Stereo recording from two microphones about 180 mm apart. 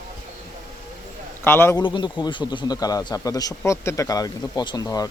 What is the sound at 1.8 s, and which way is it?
A man's voice, 25° left (ahead or behind).